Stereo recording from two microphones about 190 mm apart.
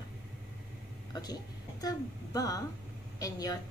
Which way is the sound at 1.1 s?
20° left (ahead or behind).